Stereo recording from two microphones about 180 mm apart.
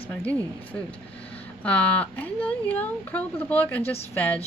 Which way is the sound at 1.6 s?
5° left (ahead or behind).